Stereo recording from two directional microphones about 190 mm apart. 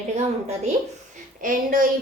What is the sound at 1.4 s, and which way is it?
Speech, 45° right (ahead or behind).